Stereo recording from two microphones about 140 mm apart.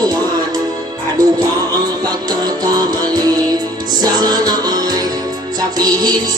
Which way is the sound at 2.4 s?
30° right (ahead or behind).